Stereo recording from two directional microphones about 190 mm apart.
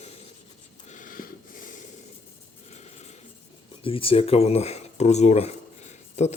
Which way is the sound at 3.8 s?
30° left (ahead or behind).